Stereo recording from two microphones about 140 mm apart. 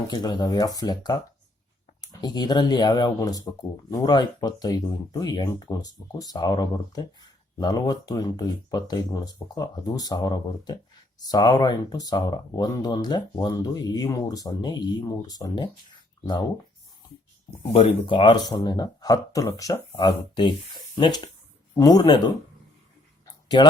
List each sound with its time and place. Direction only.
0.1 s speech: 30° left (ahead or behind)
17.6 s speech: 45° left (ahead or behind)
18.0 s speech: 35° left (ahead or behind)
23.2 s a sound: 30° left (ahead or behind)